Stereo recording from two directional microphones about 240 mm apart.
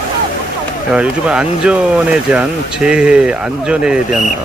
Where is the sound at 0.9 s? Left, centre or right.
Centre.